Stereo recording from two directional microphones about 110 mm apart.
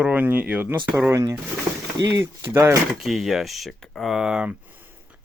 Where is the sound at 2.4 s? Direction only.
25° right (ahead or behind).